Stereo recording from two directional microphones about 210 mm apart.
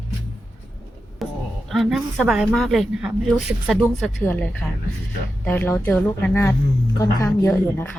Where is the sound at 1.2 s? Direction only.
Centre (ahead or behind).